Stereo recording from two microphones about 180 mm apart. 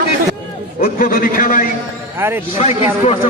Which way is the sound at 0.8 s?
55° left (ahead or behind).